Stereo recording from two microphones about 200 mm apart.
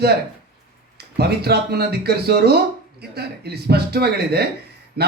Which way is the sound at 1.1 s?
55° right (ahead or behind).